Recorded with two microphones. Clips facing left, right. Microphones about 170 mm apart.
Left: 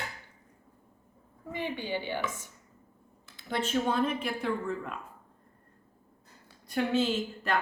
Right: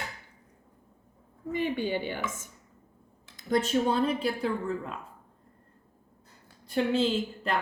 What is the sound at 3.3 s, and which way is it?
Speech, 40° right (ahead or behind).